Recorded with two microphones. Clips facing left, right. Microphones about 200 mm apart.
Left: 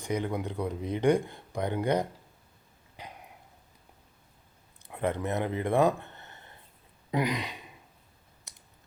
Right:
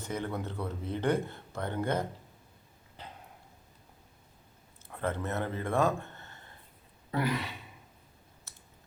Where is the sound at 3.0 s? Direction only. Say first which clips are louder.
Left 2 dB; 10° left (ahead or behind).